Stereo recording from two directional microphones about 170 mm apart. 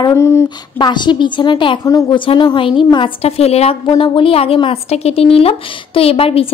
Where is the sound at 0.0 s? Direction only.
15° left (ahead or behind).